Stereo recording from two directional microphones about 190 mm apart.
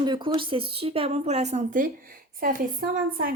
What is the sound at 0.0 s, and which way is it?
A woman's voice, 25° right (ahead or behind).